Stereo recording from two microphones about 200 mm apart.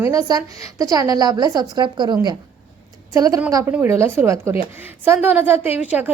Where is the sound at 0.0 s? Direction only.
20° right (ahead or behind).